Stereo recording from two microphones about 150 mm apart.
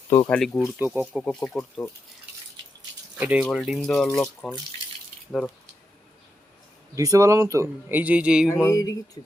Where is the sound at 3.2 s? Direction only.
10° right (ahead or behind); by 4.5 s 5° left (ahead or behind).